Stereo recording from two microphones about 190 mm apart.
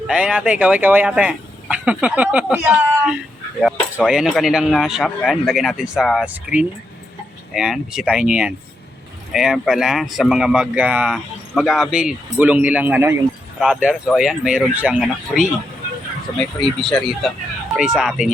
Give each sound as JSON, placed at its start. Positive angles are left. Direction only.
{"t": 0.1, "sound": "speech", "side_deg": -5}